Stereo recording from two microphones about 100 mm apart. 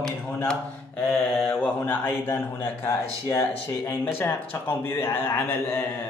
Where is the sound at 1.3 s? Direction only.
15° left (ahead or behind).